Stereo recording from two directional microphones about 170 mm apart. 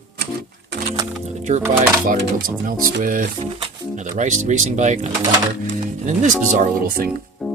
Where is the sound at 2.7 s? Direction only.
50° right (ahead or behind).